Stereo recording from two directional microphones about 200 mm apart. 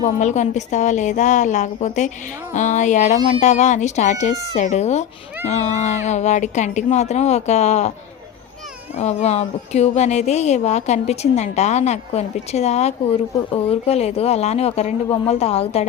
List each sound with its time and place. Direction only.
0.0 s a woman's voice: 35° left (ahead or behind)
9.0 s a woman's voice: 35° left (ahead or behind)